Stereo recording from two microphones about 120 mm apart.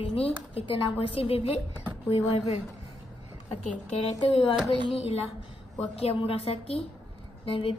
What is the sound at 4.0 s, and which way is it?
A woman's voice, 55° left (ahead or behind).